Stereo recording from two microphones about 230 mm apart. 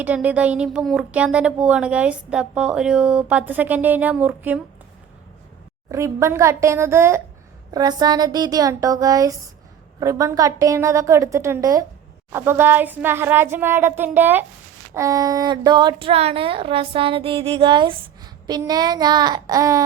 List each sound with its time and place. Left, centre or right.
0.0 s speech: centre
5.9 s speech: centre